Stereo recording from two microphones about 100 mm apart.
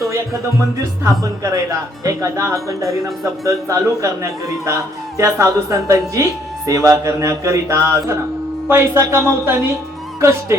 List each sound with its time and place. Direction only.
1.2 s a man's voice: 30° right (ahead or behind)